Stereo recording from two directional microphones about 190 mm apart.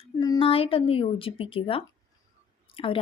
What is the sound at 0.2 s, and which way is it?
Speech, 25° left (ahead or behind).